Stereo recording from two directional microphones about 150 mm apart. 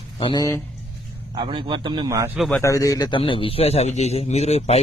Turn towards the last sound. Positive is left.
turn(degrees=45)  # may be behind; listen again after turning